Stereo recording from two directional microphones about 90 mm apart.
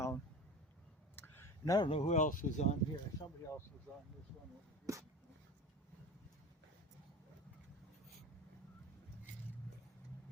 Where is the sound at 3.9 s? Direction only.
20° left (ahead or behind).